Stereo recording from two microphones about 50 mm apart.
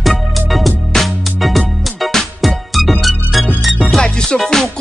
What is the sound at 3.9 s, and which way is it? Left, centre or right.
Music, centre.